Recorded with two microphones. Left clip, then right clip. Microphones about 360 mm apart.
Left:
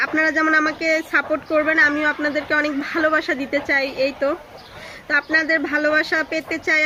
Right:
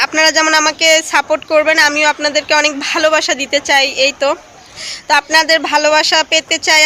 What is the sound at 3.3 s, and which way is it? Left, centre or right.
Speech, right.